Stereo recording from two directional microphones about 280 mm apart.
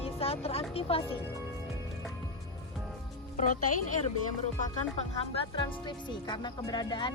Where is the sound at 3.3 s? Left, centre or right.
Left.